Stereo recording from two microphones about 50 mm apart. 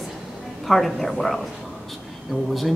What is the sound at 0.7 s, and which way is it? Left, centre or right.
Speech, centre.